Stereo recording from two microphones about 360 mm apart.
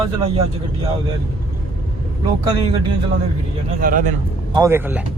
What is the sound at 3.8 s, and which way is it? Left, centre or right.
Speech, right.